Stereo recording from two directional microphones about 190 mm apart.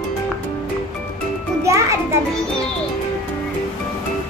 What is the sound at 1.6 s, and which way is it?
Speech, 15° right (ahead or behind).